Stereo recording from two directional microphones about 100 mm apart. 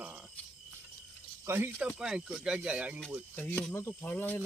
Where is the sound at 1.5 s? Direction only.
20° right (ahead or behind).